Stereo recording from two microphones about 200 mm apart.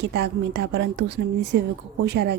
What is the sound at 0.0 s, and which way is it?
Speech, 55° right (ahead or behind).